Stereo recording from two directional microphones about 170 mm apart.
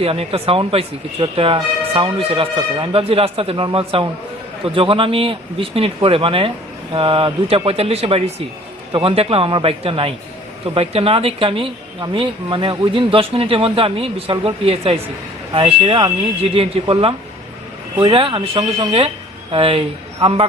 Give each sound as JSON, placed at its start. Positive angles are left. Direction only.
{"t": 0.0, "sound": "speech", "side_deg": -35}